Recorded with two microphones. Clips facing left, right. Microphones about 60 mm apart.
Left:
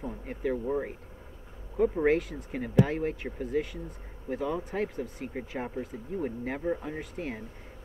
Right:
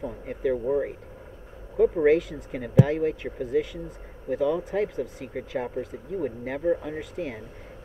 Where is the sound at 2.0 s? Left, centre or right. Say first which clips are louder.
Right 5 dB; centre.